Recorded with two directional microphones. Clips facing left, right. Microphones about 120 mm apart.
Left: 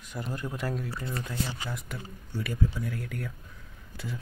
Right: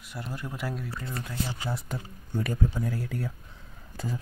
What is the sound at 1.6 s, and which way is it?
Speech, 30° right (ahead or behind).